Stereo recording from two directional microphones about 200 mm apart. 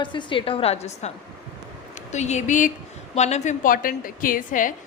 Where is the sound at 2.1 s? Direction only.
35° left (ahead or behind).